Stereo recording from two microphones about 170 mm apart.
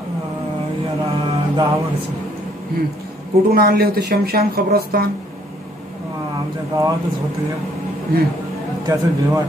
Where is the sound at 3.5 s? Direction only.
65° right (ahead or behind).